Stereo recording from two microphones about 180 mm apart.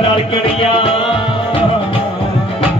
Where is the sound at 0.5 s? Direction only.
30° left (ahead or behind).